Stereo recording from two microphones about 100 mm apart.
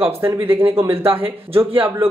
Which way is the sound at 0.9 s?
70° right (ahead or behind).